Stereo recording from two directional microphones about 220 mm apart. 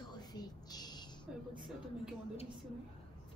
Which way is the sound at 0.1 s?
20° left (ahead or behind).